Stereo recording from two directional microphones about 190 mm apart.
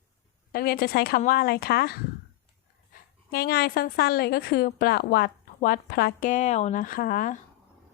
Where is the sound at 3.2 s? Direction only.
55° left (ahead or behind).